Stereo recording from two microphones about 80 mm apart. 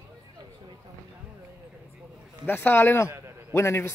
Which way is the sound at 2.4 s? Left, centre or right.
Left.